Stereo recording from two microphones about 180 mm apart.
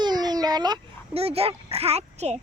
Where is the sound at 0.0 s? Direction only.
20° right (ahead or behind).